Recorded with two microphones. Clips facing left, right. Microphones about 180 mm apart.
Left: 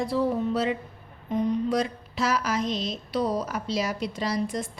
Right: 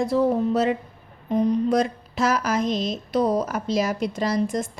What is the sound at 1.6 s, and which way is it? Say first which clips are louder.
A woman's voice: right 5 dB; 50° right (ahead or behind).